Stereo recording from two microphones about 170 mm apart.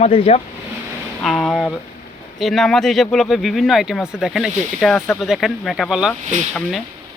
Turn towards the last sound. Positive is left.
turn(degrees=0)  # may be behind; listen again after turning